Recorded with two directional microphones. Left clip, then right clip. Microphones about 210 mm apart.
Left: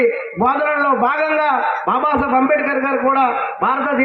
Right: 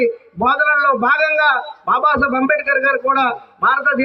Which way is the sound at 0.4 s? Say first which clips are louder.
Right 2 dB; 25° left (ahead or behind).